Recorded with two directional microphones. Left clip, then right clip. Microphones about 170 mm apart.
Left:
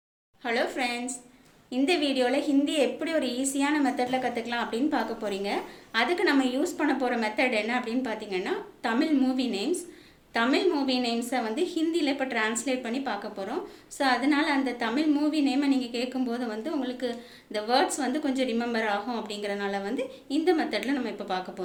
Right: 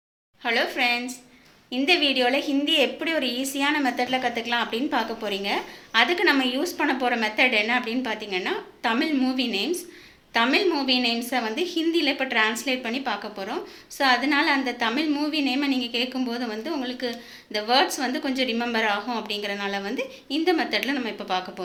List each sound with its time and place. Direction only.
0.4 s a woman's voice: 5° right (ahead or behind)